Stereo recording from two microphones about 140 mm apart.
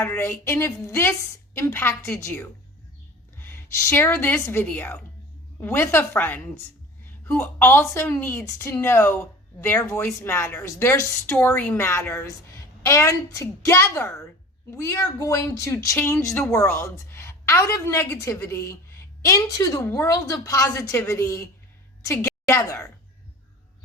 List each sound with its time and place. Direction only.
0.0 s a woman's voice: 15° left (ahead or behind)